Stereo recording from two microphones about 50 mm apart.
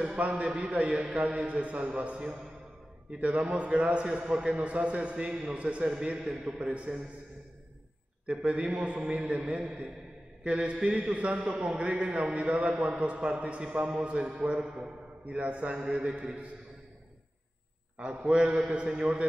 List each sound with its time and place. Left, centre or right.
0.2 s a man's voice: right
8.3 s a man's voice: right
14.6 s a man's voice: centre
15.2 s a man's voice: right
17.9 s a man's voice: right